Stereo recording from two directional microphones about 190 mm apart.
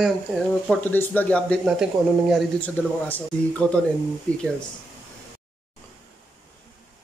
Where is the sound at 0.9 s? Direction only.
10° left (ahead or behind).